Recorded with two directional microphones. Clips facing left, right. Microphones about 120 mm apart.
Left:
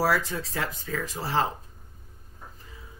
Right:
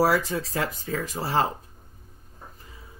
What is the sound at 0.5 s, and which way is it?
Speech, 45° right (ahead or behind).